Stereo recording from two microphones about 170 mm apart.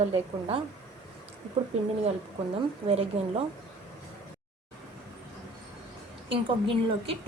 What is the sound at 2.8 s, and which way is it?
Speech, 35° right (ahead or behind).